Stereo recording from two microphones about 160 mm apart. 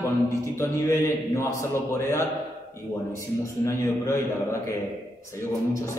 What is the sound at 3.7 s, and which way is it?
Speech, 20° left (ahead or behind).